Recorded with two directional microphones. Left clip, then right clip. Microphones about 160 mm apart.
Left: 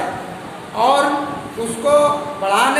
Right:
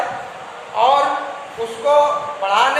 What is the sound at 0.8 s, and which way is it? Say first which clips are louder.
Speech: even; 25° right (ahead or behind).